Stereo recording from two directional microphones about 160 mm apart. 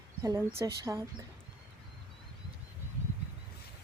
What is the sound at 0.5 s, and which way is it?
Speech, 20° right (ahead or behind).